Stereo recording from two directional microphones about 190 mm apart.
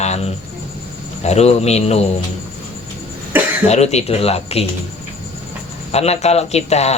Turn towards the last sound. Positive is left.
turn(degrees=35)  # may be behind; listen again after turning